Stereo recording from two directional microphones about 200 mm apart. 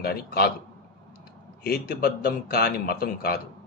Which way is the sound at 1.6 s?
50° left (ahead or behind).